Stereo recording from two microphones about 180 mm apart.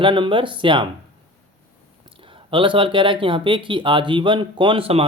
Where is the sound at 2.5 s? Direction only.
30° right (ahead or behind).